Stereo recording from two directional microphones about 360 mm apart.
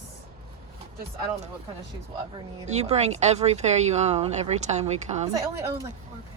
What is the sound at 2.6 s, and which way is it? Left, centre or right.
Speech, centre.